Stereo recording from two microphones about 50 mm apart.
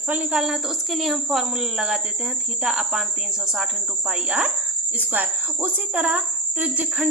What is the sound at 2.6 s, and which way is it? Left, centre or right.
Cricket, centre.